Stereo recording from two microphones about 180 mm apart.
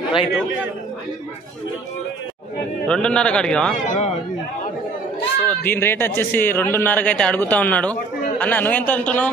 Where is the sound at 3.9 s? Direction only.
40° left (ahead or behind).